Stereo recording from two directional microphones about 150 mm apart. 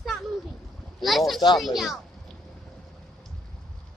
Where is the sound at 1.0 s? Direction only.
Centre (ahead or behind).